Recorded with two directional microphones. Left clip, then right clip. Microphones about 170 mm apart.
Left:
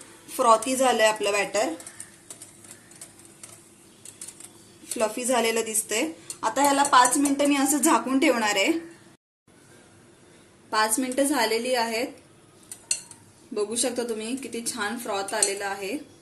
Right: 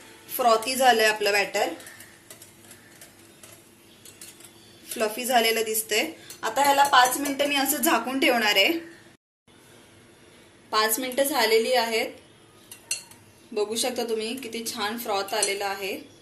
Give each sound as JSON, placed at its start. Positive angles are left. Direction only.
{"t": 0.3, "sound": "a woman's voice", "side_deg": 60}
{"t": 4.9, "sound": "a woman's voice", "side_deg": 60}
{"t": 10.7, "sound": "a woman's voice", "side_deg": 60}
{"t": 13.6, "sound": "a woman's voice", "side_deg": 60}